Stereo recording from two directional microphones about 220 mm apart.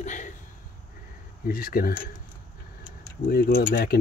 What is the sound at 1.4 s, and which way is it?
Speech, 40° left (ahead or behind).